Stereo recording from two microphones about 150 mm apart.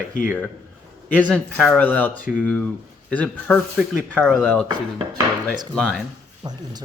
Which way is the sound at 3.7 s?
5° right (ahead or behind).